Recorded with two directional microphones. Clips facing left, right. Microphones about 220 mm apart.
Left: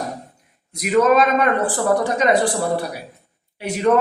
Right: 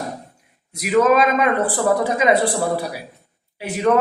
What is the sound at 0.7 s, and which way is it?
A woman's voice, 5° right (ahead or behind).